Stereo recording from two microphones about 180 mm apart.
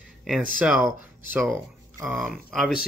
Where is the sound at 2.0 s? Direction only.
Centre (ahead or behind).